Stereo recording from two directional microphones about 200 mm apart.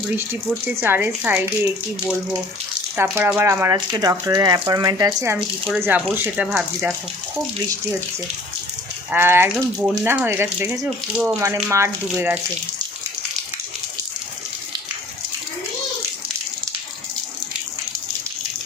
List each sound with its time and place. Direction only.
0.8 s speech: 10° right (ahead or behind)
2.9 s speech: 10° right (ahead or behind)
9.1 s speech: 10° right (ahead or behind)